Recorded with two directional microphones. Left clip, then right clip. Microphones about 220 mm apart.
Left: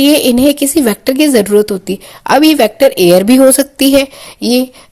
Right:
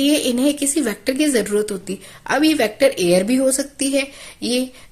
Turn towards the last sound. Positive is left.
turn(degrees=30)  # may be behind; listen again after turning